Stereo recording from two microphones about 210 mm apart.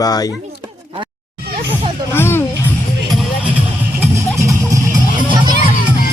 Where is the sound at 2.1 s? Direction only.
10° left (ahead or behind).